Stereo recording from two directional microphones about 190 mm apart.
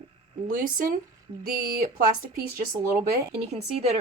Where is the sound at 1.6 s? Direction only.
50° right (ahead or behind).